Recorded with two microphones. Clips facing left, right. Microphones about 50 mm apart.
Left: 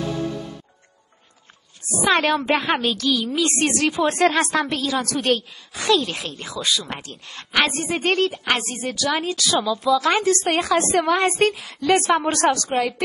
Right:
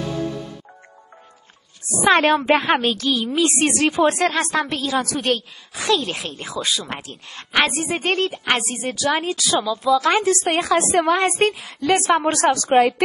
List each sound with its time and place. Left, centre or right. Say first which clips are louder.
2.0 s a woman's voice: right 3 dB; centre
4.1 s speech: left 1 dB; centre
6.2 s a woman's voice: right 1 dB; right
7.0 s a woman's voice: right 1 dB; centre
9.6 s a woman's voice: right 1 dB; centre
12.6 s a woman's voice: right 7 dB; right